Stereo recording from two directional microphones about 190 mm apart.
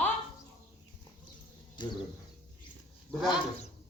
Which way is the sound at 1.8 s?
25° left (ahead or behind).